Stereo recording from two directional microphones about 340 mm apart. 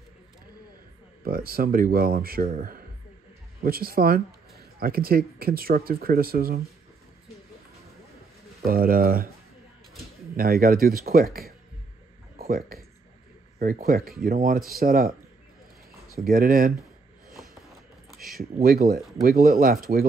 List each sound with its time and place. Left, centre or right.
1.2 s speech: right
8.6 s speech: right
10.3 s speech: right
16.3 s speech: right
18.1 s a sound: centre
18.6 s speech: right